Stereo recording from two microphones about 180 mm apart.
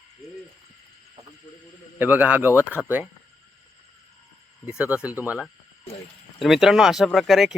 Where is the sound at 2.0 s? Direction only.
10° right (ahead or behind).